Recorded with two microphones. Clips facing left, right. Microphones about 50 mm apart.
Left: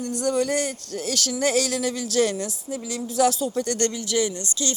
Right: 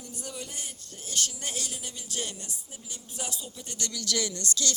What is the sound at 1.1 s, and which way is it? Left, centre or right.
Speech, left.